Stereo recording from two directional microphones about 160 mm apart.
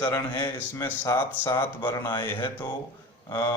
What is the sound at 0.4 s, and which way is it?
Speech, 15° left (ahead or behind).